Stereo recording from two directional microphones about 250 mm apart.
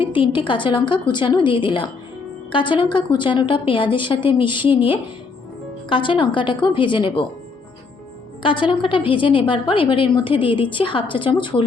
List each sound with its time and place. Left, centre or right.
0.0 s a woman's voice: centre
8.4 s a woman's voice: centre